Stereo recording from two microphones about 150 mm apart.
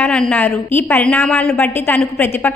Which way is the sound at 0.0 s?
5° left (ahead or behind).